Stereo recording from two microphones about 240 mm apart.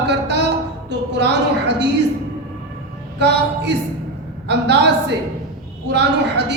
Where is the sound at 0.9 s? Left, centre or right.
Right.